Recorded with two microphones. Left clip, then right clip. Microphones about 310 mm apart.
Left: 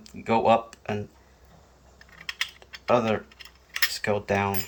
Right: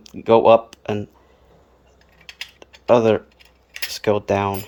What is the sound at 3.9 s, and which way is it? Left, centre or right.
Cutlery, right.